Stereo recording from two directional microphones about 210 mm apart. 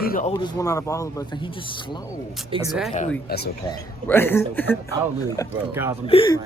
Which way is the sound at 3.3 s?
50° left (ahead or behind).